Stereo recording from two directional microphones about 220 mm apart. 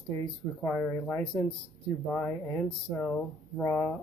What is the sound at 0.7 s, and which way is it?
Speech, 10° left (ahead or behind).